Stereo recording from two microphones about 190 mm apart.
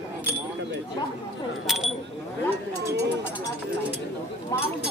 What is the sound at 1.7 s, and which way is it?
Speech, centre (ahead or behind).